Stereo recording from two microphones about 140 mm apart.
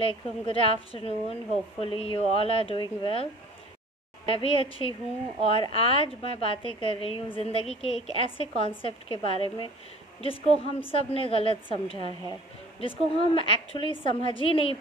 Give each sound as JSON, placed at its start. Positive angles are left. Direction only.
{"t": 0.0, "sound": "speech", "side_deg": 40}
{"t": 4.3, "sound": "a woman's voice", "side_deg": 40}